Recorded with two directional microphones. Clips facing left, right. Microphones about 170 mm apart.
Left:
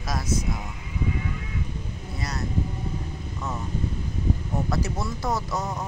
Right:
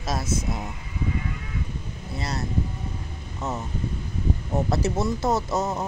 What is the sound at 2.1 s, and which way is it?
Vehicle, 30° right (ahead or behind).